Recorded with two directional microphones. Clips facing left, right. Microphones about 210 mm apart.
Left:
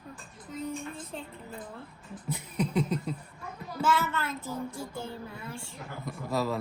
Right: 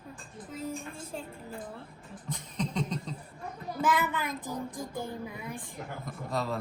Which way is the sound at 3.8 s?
15° right (ahead or behind).